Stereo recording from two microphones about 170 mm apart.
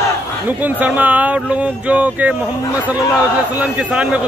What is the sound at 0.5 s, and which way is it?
A man's voice, 10° right (ahead or behind).